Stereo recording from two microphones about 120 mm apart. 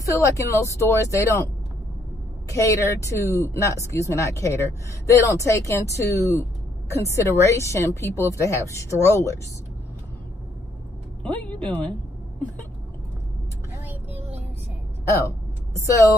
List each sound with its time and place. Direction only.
0.0 s a woman's voice: 25° left (ahead or behind)
2.5 s a woman's voice: 25° left (ahead or behind)
11.2 s a woman's voice: 10° left (ahead or behind)
15.2 s a sound: 25° left (ahead or behind)